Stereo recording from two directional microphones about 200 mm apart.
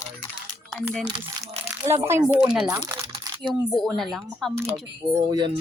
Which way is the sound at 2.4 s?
5° right (ahead or behind).